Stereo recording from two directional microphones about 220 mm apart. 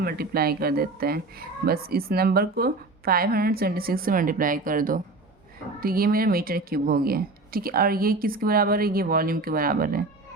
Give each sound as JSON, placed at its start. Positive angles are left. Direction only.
{"t": 0.0, "sound": "a woman's voice", "side_deg": -45}